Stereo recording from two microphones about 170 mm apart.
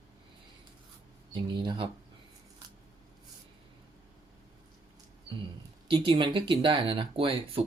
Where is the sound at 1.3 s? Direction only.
25° right (ahead or behind).